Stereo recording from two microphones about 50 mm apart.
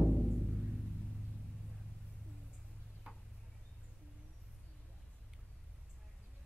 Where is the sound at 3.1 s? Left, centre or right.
Right.